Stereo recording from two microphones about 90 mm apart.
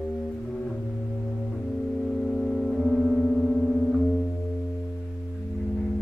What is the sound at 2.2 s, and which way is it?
Music, 5° left (ahead or behind).